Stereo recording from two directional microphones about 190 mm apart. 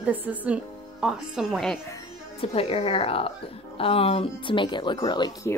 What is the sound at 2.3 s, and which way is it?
Speech, 30° left (ahead or behind).